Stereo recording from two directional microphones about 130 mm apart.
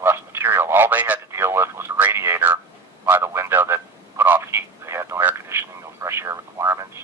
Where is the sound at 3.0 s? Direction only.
20° right (ahead or behind).